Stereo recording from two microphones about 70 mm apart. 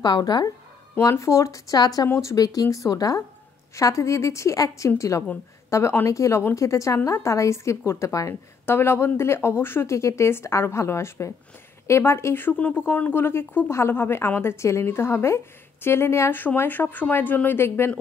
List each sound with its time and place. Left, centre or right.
0.0 s speech: left
1.2 s a woman's voice: left
1.8 s speech: left
2.0 s speech: left
2.3 s speech: left
3.7 s a woman's voice: left
8.6 s speech: left
16.3 s speech: left
17.6 s speech: left